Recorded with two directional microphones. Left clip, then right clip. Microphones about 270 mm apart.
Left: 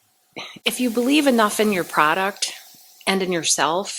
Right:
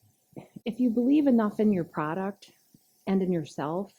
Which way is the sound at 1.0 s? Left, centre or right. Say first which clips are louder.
Left 8 dB; centre.